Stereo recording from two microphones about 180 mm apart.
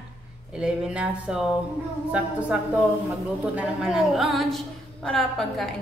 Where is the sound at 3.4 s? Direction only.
5° right (ahead or behind).